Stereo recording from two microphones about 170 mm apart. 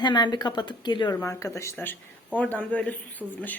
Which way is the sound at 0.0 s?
25° left (ahead or behind).